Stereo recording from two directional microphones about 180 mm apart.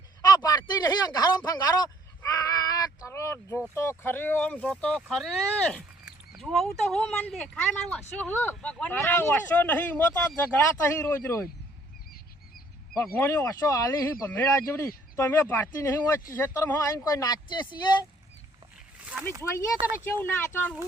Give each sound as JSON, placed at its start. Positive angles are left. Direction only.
{"t": 0.2, "sound": "a sound", "side_deg": 20}
{"t": 3.8, "sound": "speech", "side_deg": 15}
{"t": 13.1, "sound": "speech", "side_deg": 15}
{"t": 19.4, "sound": "speech", "side_deg": 15}